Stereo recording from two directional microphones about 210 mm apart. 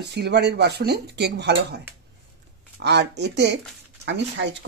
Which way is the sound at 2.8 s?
55° right (ahead or behind).